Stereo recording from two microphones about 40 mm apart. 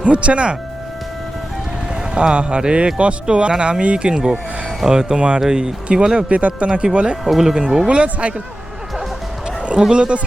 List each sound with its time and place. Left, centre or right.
0.0 s speech: right
2.1 s speech: right
4.1 s speech: centre
6.3 s speech: right
7.3 s speech: centre
7.9 s speech: right
9.9 s speech: right